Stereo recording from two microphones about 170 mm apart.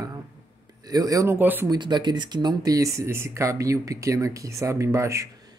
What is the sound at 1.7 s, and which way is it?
Speech, 25° right (ahead or behind).